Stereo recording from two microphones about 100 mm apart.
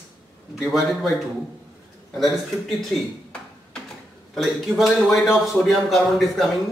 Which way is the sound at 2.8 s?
5° left (ahead or behind).